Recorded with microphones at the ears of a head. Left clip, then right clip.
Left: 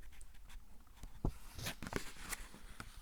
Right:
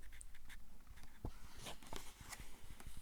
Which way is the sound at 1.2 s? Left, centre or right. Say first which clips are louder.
Left 8 dB; left.